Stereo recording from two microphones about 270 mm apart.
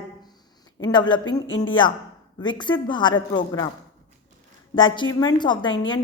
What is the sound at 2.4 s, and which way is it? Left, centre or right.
A woman's voice, centre.